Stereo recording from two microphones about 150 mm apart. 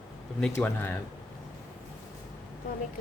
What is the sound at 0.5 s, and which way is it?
Speech, 15° left (ahead or behind).